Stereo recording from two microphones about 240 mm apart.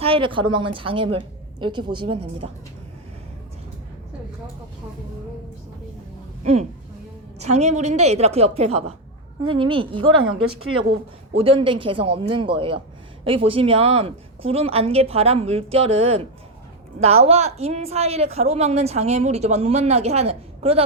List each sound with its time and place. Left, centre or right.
0.0 s a woman's voice: right
6.4 s a woman's voice: right